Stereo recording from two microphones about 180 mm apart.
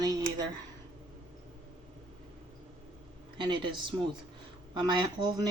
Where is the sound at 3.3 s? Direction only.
25° right (ahead or behind).